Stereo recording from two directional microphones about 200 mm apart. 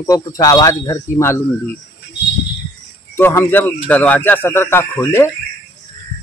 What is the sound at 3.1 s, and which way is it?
Speech, 10° left (ahead or behind).